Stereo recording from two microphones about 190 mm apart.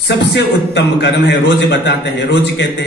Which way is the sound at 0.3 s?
65° left (ahead or behind).